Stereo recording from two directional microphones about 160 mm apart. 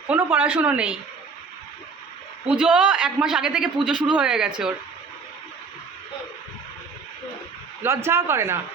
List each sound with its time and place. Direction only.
0.1 s speech: 10° right (ahead or behind)
2.6 s a man's voice: 5° right (ahead or behind)
7.8 s speech: 15° right (ahead or behind)